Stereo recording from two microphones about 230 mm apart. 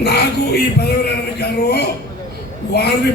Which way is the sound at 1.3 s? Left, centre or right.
Left.